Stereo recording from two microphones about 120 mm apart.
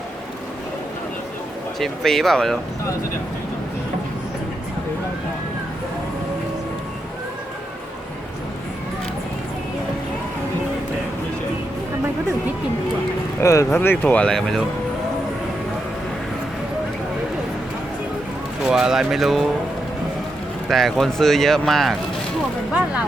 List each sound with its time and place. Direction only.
1.8 s speech: 5° left (ahead or behind)
13.4 s speech: 25° left (ahead or behind); by 14.6 s 5° left (ahead or behind)
18.6 s speech: 5° right (ahead or behind)
20.7 s speech: centre (ahead or behind)